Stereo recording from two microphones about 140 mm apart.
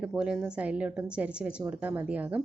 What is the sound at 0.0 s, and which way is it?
A woman's voice, 5° right (ahead or behind).